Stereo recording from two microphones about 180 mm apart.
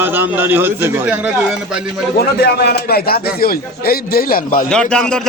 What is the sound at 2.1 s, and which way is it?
A man's voice, 60° left (ahead or behind).